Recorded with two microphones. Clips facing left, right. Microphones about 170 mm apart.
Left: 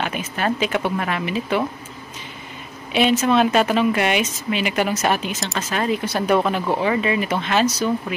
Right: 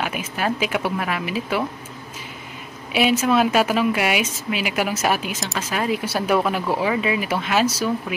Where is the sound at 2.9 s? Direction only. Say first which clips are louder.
Left 1 dB; 5° right (ahead or behind).